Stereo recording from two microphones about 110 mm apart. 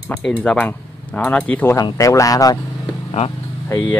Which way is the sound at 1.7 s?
30° left (ahead or behind).